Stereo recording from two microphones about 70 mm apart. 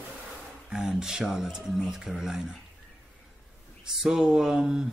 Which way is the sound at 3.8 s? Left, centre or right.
Centre.